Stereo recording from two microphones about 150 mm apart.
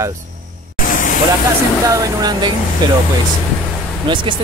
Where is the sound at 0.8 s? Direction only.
65° left (ahead or behind).